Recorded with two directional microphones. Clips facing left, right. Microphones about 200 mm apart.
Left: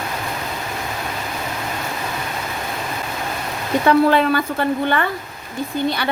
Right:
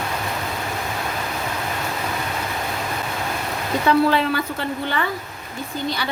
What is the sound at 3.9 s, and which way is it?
A woman's voice, 55° left (ahead or behind).